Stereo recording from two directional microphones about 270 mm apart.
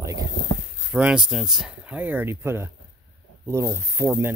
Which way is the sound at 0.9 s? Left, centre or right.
Centre.